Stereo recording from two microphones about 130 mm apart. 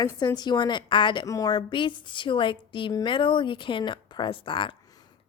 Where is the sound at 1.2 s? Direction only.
25° left (ahead or behind).